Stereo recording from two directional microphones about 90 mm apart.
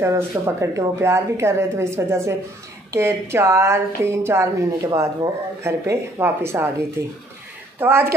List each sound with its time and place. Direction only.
0.0 s a woman's voice: 35° right (ahead or behind)
7.8 s speech: 25° right (ahead or behind)